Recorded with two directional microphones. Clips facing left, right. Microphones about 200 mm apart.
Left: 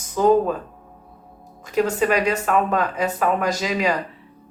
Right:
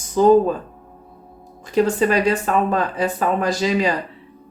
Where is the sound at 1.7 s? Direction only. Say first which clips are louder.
Right 2 dB; 30° right (ahead or behind).